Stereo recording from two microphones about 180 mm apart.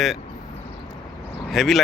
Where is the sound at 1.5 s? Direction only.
Centre (ahead or behind).